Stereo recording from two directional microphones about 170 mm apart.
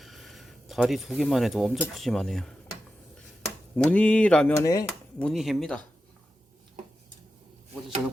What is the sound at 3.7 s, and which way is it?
Mantra, 10° left (ahead or behind).